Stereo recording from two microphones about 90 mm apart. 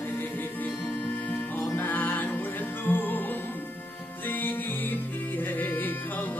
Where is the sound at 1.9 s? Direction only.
20° left (ahead or behind).